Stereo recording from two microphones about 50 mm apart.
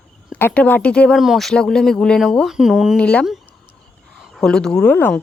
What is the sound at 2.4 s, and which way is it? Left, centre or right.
Speech, centre.